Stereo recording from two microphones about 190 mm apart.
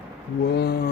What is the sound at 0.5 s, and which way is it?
Speech, 60° left (ahead or behind).